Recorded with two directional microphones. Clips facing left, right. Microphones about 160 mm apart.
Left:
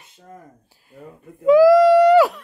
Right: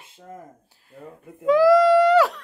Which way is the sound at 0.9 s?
Centre (ahead or behind).